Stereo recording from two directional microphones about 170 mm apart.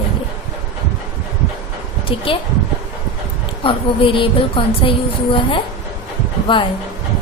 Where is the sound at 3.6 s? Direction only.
30° left (ahead or behind).